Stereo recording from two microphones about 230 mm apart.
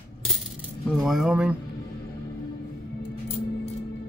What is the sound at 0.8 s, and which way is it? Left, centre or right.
Speech, centre.